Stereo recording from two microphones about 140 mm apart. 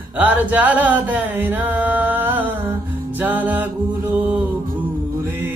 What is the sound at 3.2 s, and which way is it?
Music, 10° right (ahead or behind).